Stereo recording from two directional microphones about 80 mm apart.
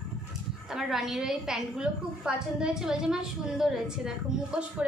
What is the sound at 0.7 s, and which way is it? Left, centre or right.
A woman's voice, centre.